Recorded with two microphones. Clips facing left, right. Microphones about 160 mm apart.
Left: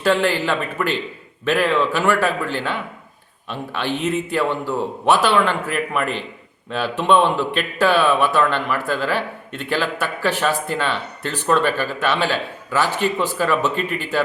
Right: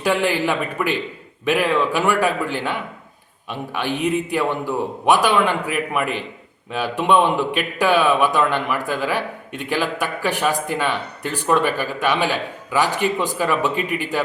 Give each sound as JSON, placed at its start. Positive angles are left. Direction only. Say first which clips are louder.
{"t": 0.0, "sound": "speech", "louder": "left 1 dB", "side_deg": -15}